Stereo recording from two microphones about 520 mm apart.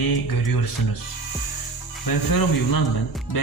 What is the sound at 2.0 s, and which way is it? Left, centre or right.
Music, left.